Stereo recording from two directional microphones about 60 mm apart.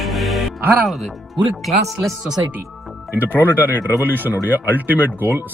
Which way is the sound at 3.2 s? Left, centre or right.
Left.